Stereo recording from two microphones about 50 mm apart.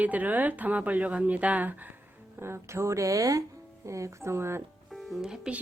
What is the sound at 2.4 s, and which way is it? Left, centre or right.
Speech, right.